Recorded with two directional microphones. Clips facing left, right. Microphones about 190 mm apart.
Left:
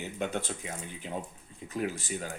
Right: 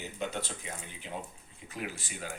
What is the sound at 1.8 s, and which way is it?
Speech, 45° left (ahead or behind).